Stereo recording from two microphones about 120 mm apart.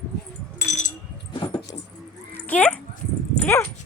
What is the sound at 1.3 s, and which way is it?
Keys jangling, 40° left (ahead or behind).